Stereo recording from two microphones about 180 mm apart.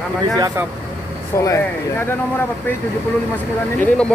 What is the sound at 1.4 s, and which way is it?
Speech, 15° left (ahead or behind).